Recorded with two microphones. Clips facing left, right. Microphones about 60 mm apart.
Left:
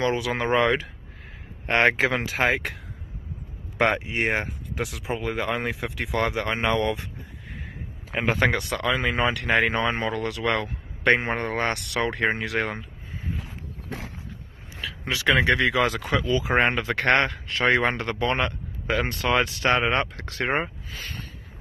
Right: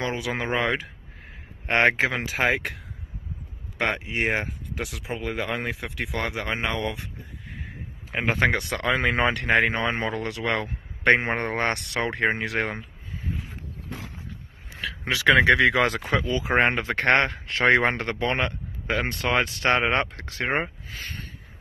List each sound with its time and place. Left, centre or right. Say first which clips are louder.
0.0 s speech: left 3 dB; centre
1.7 s speech: even; centre
2.0 s speech: left 1 dB; centre
7.5 s a sound: left 1 dB; centre
8.5 s speech: even; right
8.8 s speech: right 2 dB; right
14.8 s a sound: right 2 dB; right
15.4 s speech: right 3 dB; right
16.0 s speech: left 1 dB; right
17.5 s speech: right 3 dB; right
18.3 s speech: left 1 dB; right
20.4 s speech: even; centre